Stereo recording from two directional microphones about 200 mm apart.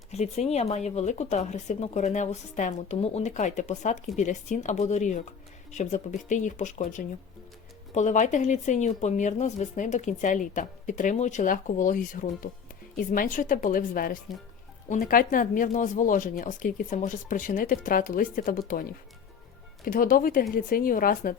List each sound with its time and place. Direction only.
0.1 s a woman's voice: 30° left (ahead or behind)
19.8 s a woman's voice: 45° left (ahead or behind)